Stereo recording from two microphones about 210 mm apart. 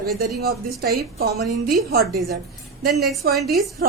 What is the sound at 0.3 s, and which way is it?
A woman's voice, 50° right (ahead or behind).